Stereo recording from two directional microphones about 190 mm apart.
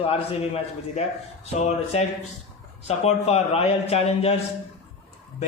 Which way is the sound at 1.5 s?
35° left (ahead or behind).